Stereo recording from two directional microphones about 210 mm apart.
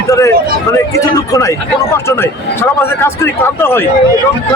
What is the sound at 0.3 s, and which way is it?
Speech, 45° right (ahead or behind).